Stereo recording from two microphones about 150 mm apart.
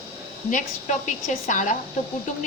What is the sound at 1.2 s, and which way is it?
Speech, 55° left (ahead or behind).